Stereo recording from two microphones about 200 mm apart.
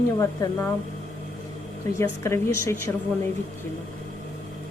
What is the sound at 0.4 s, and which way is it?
Speech, 15° left (ahead or behind).